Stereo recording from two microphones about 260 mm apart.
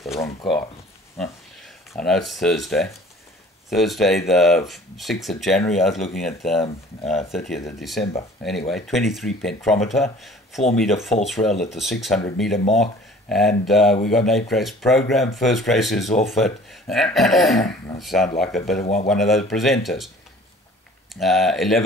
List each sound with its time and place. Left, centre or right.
0.2 s speech: centre
2.0 s speech: centre
8.6 s speech: centre
11.4 s speech: centre
11.7 s speech: centre
12.6 s speech: left
13.3 s speech: centre
18.8 s speech: left
19.0 s speech: centre
21.1 s speech: centre